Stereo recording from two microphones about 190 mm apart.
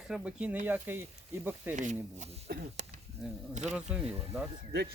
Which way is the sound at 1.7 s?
40° right (ahead or behind).